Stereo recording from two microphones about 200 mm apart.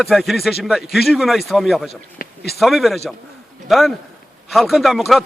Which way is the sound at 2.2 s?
50° left (ahead or behind).